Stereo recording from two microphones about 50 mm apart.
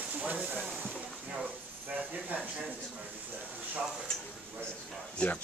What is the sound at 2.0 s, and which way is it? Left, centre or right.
Speech, right.